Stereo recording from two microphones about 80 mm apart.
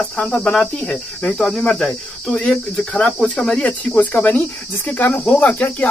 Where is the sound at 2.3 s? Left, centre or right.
Left.